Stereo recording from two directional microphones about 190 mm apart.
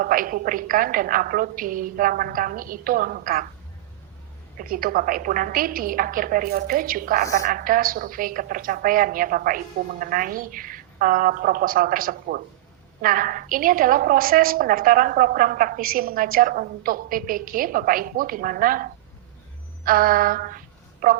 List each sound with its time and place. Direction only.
0.0 s a woman's voice: 45° right (ahead or behind)
4.5 s a woman's voice: 50° right (ahead or behind)